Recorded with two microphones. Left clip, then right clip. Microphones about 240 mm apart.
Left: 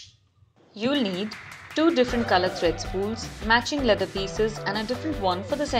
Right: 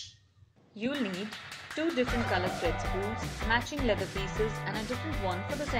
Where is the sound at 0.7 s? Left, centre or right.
Centre.